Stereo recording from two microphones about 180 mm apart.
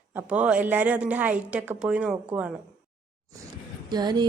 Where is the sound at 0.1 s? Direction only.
10° right (ahead or behind).